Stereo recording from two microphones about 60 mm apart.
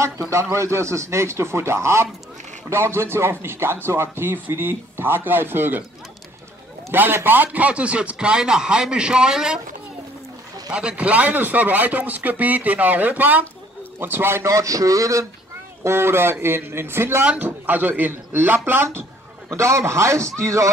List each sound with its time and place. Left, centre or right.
0.0 s a man's voice: right
6.9 s a man's voice: right; by 9.6 s centre
10.7 s a man's voice: centre; by 15.2 s right
15.8 s a man's voice: right
17.2 s a man's voice: right
17.5 s a man's voice: right
19.5 s a man's voice: right